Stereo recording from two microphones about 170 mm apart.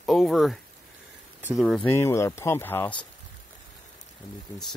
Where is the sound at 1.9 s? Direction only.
15° left (ahead or behind).